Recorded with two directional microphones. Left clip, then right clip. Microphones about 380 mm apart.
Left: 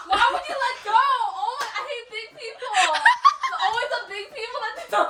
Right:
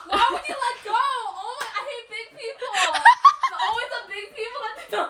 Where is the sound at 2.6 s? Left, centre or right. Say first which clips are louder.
Right 2 dB; centre.